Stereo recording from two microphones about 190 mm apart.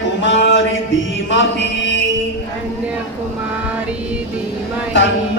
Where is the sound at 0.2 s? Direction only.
75° left (ahead or behind).